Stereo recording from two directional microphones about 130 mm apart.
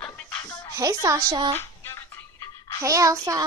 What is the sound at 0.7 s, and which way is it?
Speech, 25° right (ahead or behind).